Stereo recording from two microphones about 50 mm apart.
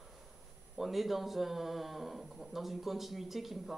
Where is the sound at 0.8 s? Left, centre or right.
Centre.